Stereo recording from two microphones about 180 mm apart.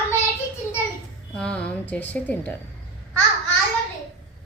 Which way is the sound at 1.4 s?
5° left (ahead or behind).